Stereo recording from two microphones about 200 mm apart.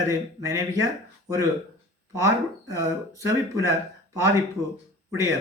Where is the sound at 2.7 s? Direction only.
15° right (ahead or behind).